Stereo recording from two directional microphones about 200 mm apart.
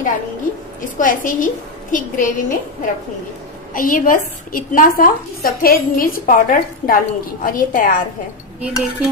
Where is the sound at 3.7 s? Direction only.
45° left (ahead or behind).